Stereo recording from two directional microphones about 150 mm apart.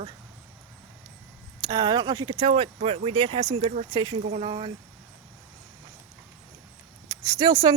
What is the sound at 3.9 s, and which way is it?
Speech, 30° right (ahead or behind).